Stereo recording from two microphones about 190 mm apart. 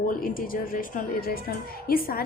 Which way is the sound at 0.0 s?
45° left (ahead or behind).